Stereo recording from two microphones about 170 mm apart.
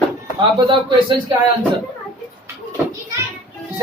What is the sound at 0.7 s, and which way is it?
Speech, 30° right (ahead or behind).